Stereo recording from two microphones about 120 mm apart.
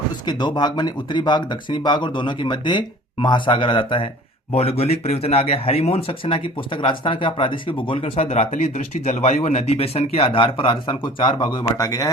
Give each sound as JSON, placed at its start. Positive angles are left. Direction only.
{"t": 0.3, "sound": "speech", "side_deg": 35}
{"t": 4.5, "sound": "speech", "side_deg": 60}
{"t": 10.2, "sound": "speech", "side_deg": 45}